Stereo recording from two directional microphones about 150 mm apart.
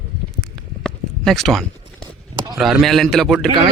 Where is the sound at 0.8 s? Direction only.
Centre (ahead or behind).